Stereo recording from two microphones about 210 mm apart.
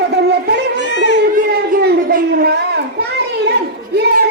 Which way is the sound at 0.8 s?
55° left (ahead or behind).